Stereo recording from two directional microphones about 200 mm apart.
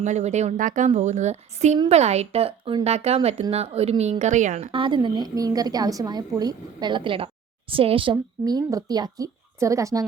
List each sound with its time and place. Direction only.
0.0 s a woman's voice: 35° right (ahead or behind); by 10.0 s 15° right (ahead or behind)